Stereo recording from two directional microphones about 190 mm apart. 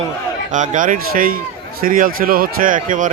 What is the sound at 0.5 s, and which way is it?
A man's voice, 45° right (ahead or behind).